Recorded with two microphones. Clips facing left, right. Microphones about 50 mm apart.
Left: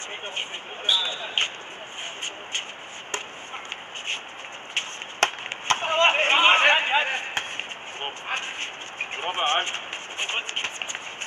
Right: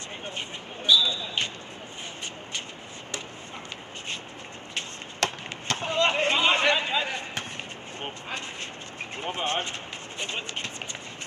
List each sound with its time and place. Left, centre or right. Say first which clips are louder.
0.2 s basketball bounce: left 1 dB; left
4.7 s chop: left 5 dB; left